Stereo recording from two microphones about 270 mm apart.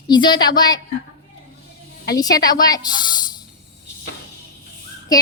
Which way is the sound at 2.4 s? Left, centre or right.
Centre.